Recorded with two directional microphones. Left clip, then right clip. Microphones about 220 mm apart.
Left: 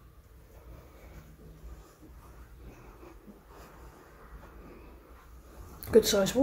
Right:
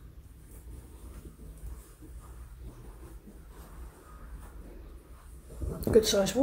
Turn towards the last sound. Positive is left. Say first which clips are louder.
# left 1 dB
turn(degrees=10)  # may be behind; listen again after turning